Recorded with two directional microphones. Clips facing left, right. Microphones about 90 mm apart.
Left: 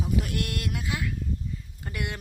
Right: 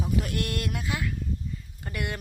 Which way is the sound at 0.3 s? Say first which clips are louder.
Right 1 dB; 15° left (ahead or behind).